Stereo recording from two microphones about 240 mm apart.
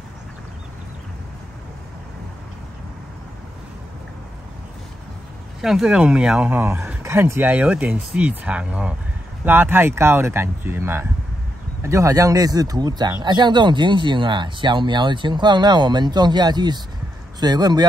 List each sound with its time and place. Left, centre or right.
5.6 s speech: centre